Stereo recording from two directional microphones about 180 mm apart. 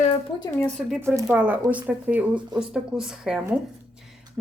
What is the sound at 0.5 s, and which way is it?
Speech, 10° left (ahead or behind).